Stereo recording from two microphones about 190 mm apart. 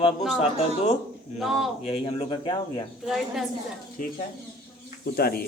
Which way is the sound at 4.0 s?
45° left (ahead or behind).